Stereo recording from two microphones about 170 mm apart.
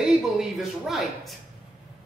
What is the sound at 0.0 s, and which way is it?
Speech, centre (ahead or behind).